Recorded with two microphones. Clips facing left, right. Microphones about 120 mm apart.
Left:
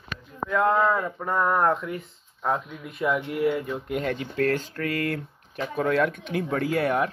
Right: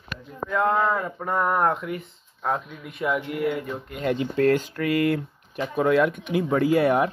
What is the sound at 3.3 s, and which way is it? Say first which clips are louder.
Speech: left 1 dB; 55° right (ahead or behind).